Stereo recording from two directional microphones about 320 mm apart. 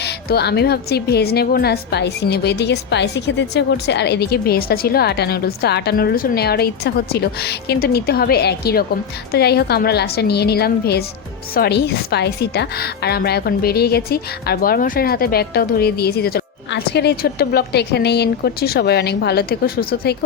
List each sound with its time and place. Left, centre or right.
0.0 s a woman's voice: left